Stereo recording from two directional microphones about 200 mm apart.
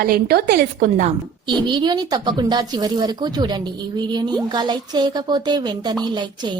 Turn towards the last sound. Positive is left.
turn(degrees=-20)  # may be behind; listen again after turning